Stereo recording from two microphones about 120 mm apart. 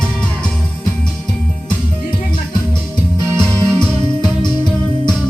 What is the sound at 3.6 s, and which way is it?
Music, 25° right (ahead or behind).